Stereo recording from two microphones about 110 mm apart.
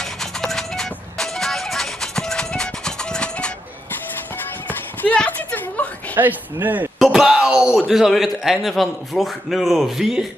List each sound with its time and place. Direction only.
0.0 s music: 5° left (ahead or behind)
4.6 s a sound: 15° left (ahead or behind)
6.1 s speech: 15° right (ahead or behind)
7.0 s a man's voice: 5° right (ahead or behind)